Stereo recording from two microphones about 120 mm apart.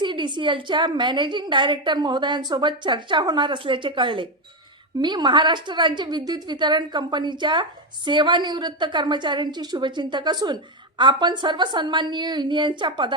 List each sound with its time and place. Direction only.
0.0 s a woman's voice: 40° right (ahead or behind)